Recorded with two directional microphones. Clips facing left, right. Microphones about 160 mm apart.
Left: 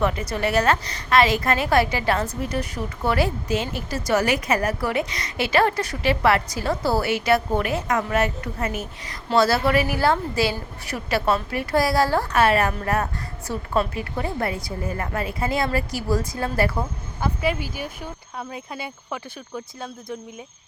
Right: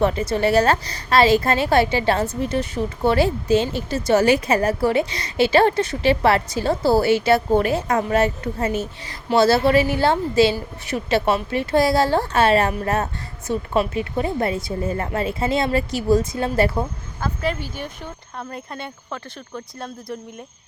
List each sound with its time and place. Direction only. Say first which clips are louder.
0.0 s a woman's voice: right 4 dB; 30° right (ahead or behind)
17.2 s speech: even; 10° left (ahead or behind)